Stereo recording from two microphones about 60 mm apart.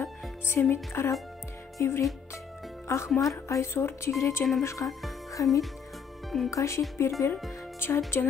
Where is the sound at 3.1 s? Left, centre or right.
Centre.